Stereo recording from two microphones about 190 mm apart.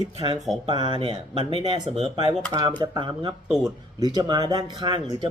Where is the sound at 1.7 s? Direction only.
25° right (ahead or behind).